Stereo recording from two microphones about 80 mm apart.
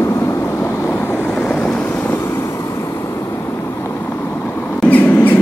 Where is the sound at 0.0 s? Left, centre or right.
Left; by 1.9 s centre.